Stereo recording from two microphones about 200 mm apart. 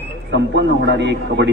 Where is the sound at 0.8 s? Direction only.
60° right (ahead or behind).